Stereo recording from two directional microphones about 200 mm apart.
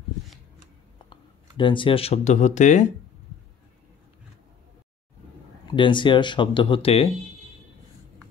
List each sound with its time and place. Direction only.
1.1 s speech: 25° left (ahead or behind)
5.7 s speech: 25° left (ahead or behind)